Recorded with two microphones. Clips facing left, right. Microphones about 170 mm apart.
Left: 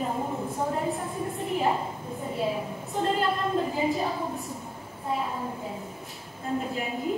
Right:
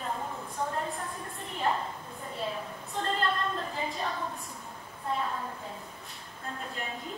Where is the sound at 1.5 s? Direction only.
10° left (ahead or behind).